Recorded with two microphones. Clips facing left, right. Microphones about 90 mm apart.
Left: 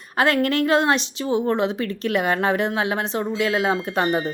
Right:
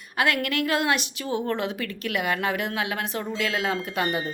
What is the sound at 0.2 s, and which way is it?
A woman's voice, 35° left (ahead or behind).